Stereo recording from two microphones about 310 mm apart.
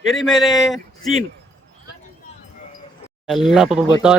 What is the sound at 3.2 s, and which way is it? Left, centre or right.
Speech, centre.